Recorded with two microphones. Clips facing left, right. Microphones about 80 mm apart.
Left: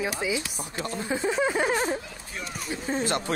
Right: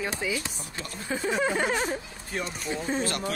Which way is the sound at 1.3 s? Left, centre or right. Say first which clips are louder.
Even; centre.